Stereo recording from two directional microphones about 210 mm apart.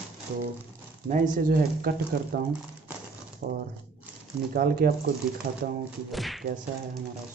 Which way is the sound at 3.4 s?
40° right (ahead or behind).